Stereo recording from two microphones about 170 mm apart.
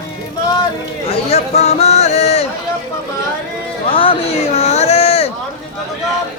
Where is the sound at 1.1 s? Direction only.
35° left (ahead or behind).